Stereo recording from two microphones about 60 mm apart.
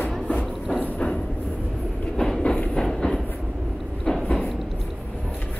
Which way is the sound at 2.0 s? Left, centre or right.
Centre.